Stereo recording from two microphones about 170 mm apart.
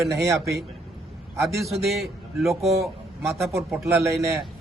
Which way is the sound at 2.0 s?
Centre (ahead or behind).